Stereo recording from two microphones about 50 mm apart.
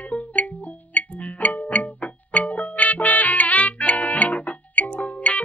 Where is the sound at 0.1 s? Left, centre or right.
Left.